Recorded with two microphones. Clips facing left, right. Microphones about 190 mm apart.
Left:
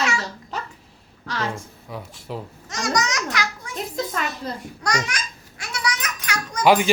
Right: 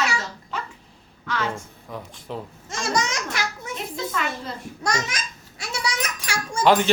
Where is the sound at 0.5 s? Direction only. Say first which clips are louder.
Even; 40° left (ahead or behind).